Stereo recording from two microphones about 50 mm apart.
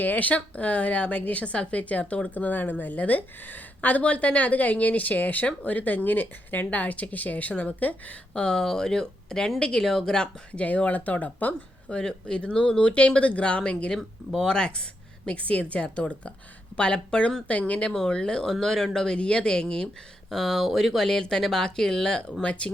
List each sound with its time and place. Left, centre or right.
0.0 s a woman's voice: left
8.3 s speech: centre
10.5 s a woman's voice: left
11.9 s speech: centre
15.3 s speech: left